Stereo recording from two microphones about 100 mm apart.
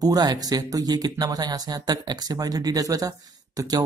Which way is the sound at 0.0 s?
40° right (ahead or behind).